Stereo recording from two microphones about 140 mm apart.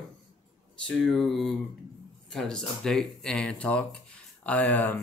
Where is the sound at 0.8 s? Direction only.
5° left (ahead or behind).